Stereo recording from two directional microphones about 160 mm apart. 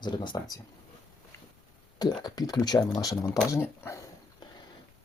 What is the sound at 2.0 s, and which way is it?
Speech, 25° left (ahead or behind).